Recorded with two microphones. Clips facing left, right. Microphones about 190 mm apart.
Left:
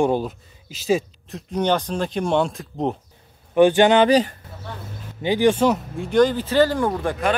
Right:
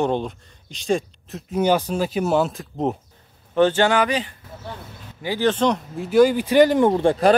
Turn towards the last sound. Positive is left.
turn(degrees=-30)  # may be behind; listen again after turning